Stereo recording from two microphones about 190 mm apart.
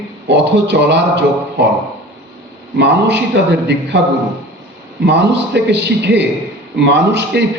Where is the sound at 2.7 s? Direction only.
65° right (ahead or behind).